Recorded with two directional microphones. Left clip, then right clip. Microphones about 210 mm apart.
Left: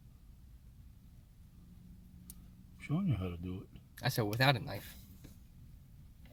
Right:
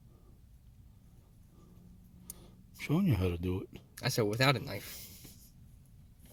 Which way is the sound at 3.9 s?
5° right (ahead or behind).